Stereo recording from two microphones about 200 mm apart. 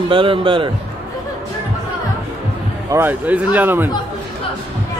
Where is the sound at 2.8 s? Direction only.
10° right (ahead or behind).